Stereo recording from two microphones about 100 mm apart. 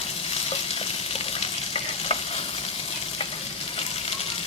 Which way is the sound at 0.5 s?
80° left.